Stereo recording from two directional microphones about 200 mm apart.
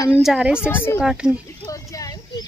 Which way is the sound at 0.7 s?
10° left (ahead or behind).